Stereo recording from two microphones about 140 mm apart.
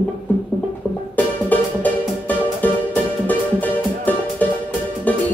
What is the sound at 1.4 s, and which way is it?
Music, 10° left (ahead or behind).